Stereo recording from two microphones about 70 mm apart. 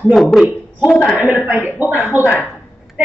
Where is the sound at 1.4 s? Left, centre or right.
Right.